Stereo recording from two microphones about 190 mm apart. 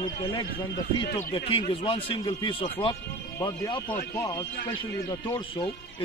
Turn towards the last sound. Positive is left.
turn(degrees=25)  # may be behind; listen again after turning